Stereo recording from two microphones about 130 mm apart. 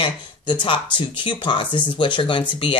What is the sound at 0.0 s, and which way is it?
Speech, 40° left (ahead or behind).